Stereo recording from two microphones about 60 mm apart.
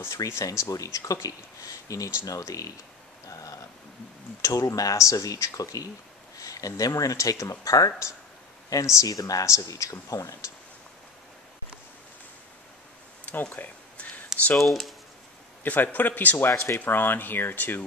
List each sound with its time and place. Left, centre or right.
0.4 s speech: left
3.3 s a sound: left
4.4 s speech: left
13.2 s a sound: left
14.6 s speech: centre
15.6 s speech: left
16.4 s speech: left